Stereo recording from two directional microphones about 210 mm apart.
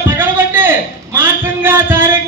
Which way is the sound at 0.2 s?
10° right (ahead or behind).